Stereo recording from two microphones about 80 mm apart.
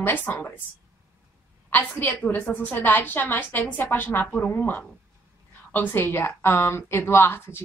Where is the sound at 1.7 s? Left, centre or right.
Left.